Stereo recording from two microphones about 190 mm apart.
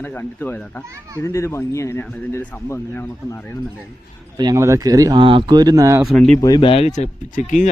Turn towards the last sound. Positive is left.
turn(degrees=40)  # may be behind; listen again after turning